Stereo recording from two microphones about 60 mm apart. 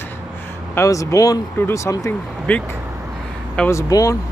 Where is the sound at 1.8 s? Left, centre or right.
Left.